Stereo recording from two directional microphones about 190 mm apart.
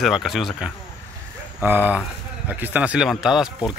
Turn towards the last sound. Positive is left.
turn(degrees=-5)  # may be behind; listen again after turning